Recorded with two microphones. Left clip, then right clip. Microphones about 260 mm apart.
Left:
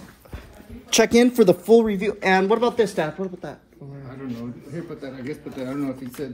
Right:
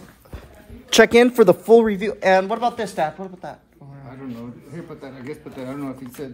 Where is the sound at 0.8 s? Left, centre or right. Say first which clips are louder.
Right 5 dB; right.